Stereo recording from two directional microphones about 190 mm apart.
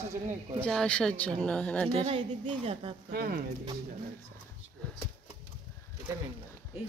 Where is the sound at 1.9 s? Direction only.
30° right (ahead or behind).